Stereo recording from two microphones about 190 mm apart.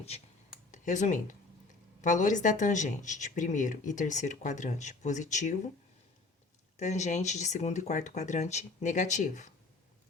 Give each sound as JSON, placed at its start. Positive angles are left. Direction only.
{"t": 0.7, "sound": "speech", "side_deg": 40}
{"t": 6.7, "sound": "speech", "side_deg": 40}